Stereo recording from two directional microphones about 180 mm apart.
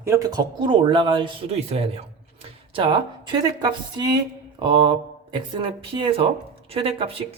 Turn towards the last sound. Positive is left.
turn(degrees=-30)  # may be behind; listen again after turning